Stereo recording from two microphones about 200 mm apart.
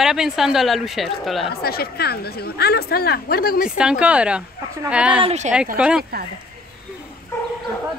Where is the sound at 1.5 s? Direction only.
50° left (ahead or behind).